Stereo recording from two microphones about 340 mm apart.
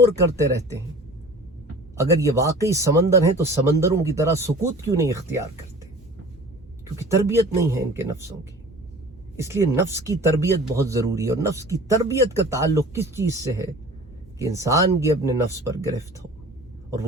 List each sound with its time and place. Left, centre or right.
0.0 s speech: centre
2.0 s speech: centre
7.1 s speech: centre
9.4 s speech: centre